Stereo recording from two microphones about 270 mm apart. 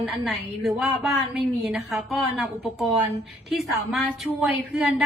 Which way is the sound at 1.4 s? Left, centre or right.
Centre.